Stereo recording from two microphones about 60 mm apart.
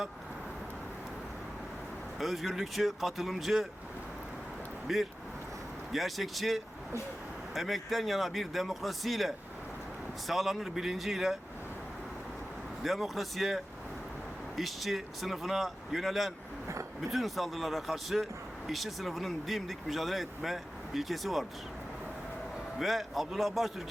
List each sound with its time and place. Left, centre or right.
2.1 s speech: centre
4.9 s speech: centre
12.8 s speech: centre
16.6 s a sound: right
17.1 s speech: centre
22.8 s speech: centre